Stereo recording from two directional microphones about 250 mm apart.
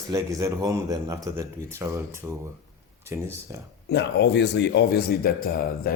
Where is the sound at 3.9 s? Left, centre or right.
Left.